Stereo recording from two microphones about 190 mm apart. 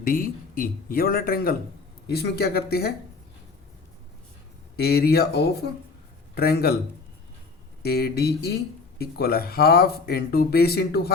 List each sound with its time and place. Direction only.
0.0 s speech: 50° left (ahead or behind)
4.8 s speech: 55° left (ahead or behind)
7.8 s speech: 55° left (ahead or behind)